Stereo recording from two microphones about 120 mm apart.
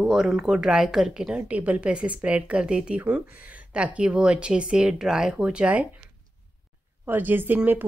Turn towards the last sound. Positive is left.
turn(degrees=-15)  # may be behind; listen again after turning